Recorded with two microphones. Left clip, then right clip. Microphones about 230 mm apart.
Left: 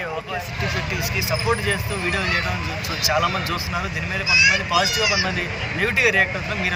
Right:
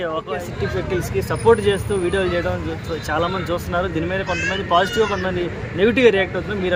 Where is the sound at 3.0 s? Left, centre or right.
Right.